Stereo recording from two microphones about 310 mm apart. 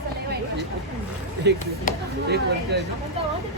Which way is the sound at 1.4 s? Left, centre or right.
Right.